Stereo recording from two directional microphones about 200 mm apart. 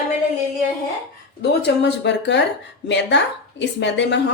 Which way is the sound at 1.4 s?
60° left (ahead or behind).